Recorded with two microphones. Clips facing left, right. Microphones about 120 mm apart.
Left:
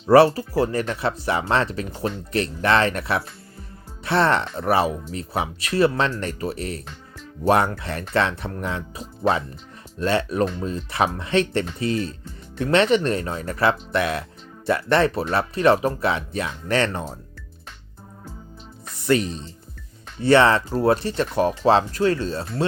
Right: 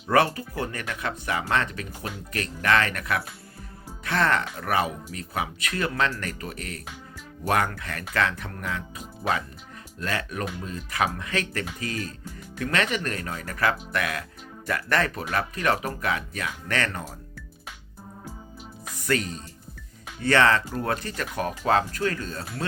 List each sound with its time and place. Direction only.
0.0 s speech: 30° left (ahead or behind)
19.0 s speech: 20° left (ahead or behind)